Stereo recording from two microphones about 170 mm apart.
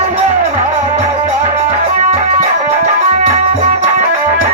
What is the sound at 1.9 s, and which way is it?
Music, 45° right (ahead or behind).